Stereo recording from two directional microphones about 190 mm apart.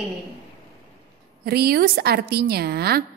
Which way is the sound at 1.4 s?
55° right (ahead or behind).